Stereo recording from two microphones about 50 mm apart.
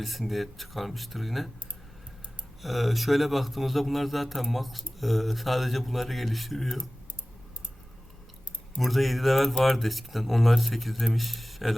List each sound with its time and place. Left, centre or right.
0.0 s a man's voice: centre
2.6 s a man's voice: centre
8.8 s a man's voice: centre